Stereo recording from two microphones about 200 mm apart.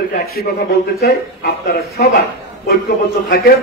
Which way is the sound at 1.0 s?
55° left (ahead or behind).